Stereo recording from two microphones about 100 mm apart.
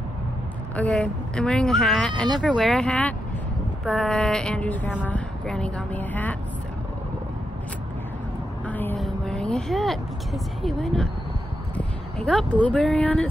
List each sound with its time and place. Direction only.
0.7 s speech: 15° left (ahead or behind)
8.6 s a sound: 20° left (ahead or behind)
8.9 s speech: 5° left (ahead or behind)